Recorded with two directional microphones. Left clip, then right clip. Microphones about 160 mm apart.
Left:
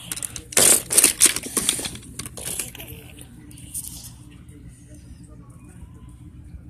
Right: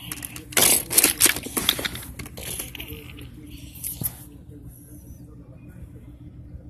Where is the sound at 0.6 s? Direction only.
30° left (ahead or behind).